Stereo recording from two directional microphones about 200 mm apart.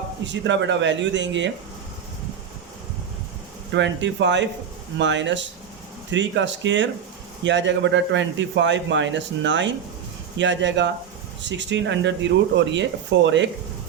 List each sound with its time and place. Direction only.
0.3 s a man's voice: 65° right (ahead or behind)
3.7 s a man's voice: 65° right (ahead or behind)